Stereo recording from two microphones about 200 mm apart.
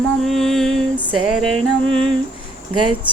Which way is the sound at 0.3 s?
Centre (ahead or behind).